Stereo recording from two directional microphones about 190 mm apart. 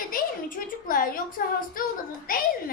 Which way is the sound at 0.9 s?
50° left (ahead or behind).